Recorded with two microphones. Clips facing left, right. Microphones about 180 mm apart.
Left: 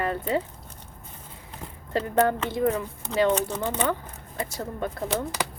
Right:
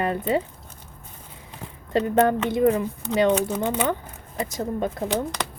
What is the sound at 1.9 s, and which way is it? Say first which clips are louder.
A woman's voice: right 3 dB; 20° right (ahead or behind).